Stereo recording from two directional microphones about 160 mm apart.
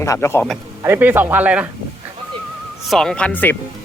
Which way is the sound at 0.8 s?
15° right (ahead or behind).